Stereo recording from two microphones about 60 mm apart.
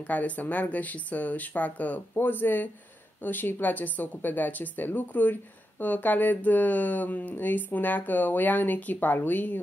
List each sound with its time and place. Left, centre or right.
0.0 s speech: left